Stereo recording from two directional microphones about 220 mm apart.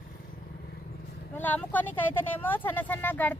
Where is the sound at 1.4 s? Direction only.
10° left (ahead or behind).